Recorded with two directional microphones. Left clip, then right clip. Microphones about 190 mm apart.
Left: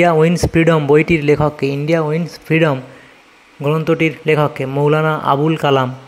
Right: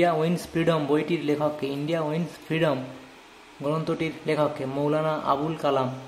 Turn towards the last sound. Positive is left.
turn(degrees=40)  # may be behind; listen again after turning